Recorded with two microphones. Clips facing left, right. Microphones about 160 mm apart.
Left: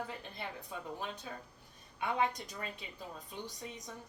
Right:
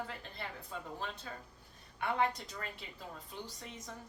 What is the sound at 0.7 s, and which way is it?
Speech, 15° left (ahead or behind).